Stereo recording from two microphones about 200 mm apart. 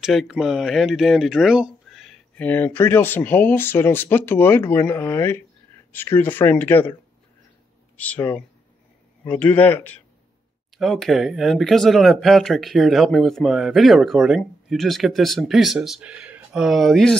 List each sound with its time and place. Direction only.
0.0 s speech: centre (ahead or behind)
8.0 s speech: 10° left (ahead or behind)